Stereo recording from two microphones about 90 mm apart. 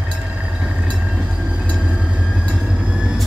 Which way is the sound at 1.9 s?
10° right (ahead or behind).